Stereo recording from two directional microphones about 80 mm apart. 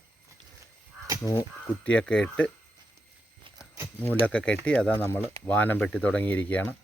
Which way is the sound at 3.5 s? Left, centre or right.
Right.